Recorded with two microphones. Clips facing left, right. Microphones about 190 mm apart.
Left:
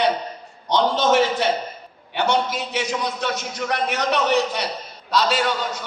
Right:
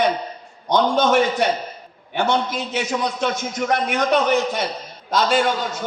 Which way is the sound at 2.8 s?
50° right (ahead or behind).